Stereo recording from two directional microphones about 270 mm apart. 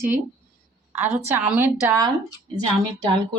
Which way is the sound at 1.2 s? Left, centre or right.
Centre.